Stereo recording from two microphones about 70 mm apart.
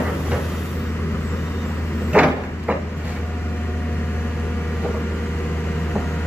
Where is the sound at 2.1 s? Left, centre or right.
Centre.